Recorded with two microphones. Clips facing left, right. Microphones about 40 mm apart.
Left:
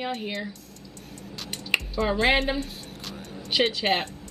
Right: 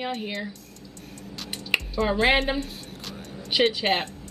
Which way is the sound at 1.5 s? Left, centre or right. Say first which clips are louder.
Even; centre.